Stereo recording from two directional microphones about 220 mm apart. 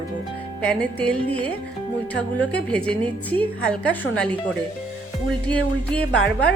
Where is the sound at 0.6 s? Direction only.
5° left (ahead or behind).